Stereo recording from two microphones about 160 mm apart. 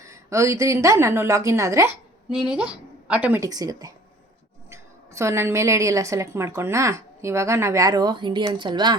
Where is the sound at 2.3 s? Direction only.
5° right (ahead or behind).